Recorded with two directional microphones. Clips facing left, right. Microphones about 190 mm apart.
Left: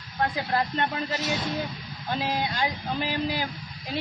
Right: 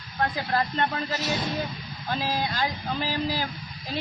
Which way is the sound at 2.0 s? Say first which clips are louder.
Even; 20° left (ahead or behind).